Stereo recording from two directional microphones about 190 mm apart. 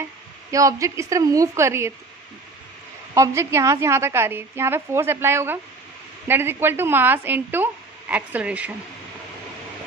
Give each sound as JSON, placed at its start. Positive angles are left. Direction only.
{"t": 0.5, "sound": "speech", "side_deg": -15}
{"t": 3.2, "sound": "speech", "side_deg": -15}